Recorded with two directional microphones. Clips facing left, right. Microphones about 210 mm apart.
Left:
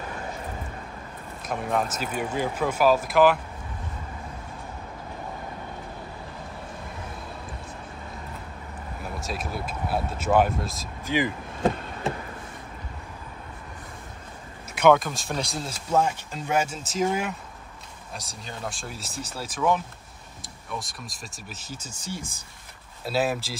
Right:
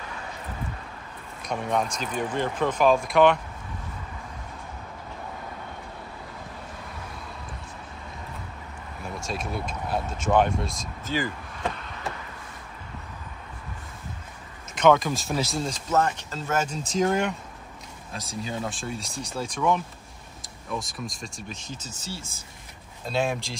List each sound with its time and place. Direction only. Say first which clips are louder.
1.4 s speech: even; centre (ahead or behind)
9.2 s speech: right 2 dB; 5° left (ahead or behind)
11.1 s speech: left 3 dB; 15° left (ahead or behind)
11.6 s a sound: left 7 dB; 30° left (ahead or behind)
14.8 s speech: left 1 dB; 5° left (ahead or behind)
20.8 s speech: right 5 dB; centre (ahead or behind)
23.0 s speech: left 1 dB; 5° left (ahead or behind)